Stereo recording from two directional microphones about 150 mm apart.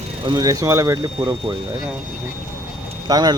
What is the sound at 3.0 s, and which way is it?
Speech, 25° right (ahead or behind).